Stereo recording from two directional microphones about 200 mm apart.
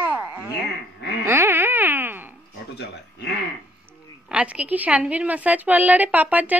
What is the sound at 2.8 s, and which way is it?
Speech, 55° left (ahead or behind).